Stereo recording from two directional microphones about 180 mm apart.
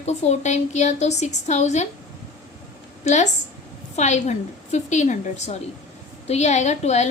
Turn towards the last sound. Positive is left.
turn(degrees=40)  # may be behind; listen again after turning